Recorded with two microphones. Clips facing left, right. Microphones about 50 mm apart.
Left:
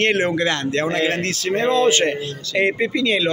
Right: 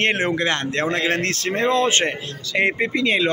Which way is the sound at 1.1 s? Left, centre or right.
Right.